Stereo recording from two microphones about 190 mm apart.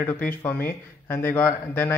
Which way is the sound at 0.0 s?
10° left (ahead or behind).